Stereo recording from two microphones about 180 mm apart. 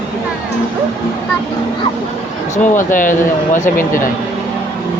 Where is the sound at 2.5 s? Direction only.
45° left (ahead or behind).